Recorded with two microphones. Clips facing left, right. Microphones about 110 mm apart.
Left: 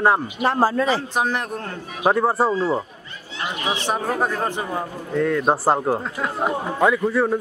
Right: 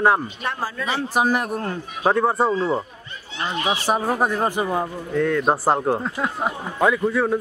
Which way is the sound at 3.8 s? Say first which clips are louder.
Right 1 dB; 10° right (ahead or behind).